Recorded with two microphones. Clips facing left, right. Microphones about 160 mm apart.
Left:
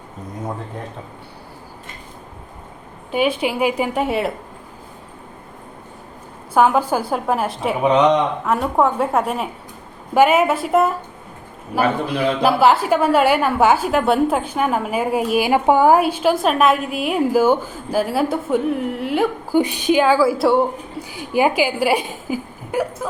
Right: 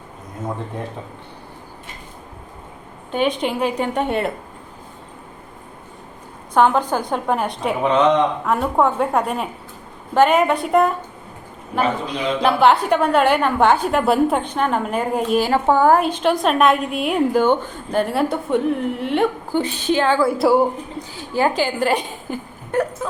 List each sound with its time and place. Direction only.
3.1 s a woman's voice: 5° left (ahead or behind)
6.5 s a woman's voice: 5° left (ahead or behind)
7.9 s a woman's voice: 15° left (ahead or behind)
8.4 s a woman's voice: centre (ahead or behind)
12.4 s a woman's voice: 5° left (ahead or behind)
21.1 s a woman's voice: 15° left (ahead or behind)